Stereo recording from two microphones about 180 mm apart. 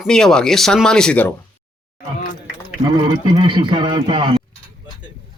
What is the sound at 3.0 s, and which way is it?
Speech, 30° right (ahead or behind).